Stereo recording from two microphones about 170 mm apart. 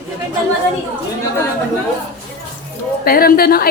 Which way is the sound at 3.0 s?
60° left (ahead or behind).